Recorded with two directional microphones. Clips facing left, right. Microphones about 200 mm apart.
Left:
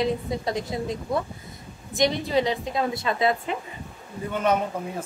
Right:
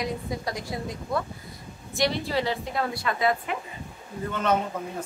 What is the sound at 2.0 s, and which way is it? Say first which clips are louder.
A woman's voice: left 4 dB; 20° left (ahead or behind).